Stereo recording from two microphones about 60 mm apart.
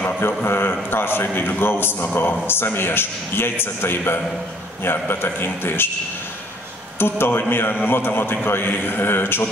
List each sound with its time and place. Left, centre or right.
0.5 s a man's voice: left
7.0 s a man's voice: left